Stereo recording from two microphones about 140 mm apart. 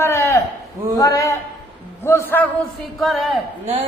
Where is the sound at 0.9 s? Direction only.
25° left (ahead or behind).